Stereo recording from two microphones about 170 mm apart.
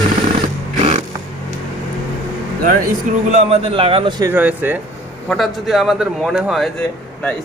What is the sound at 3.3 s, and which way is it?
Speech, 35° right (ahead or behind).